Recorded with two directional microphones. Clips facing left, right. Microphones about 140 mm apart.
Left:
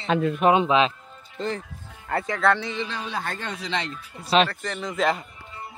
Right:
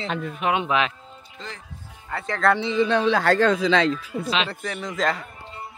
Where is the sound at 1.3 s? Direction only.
45° left (ahead or behind).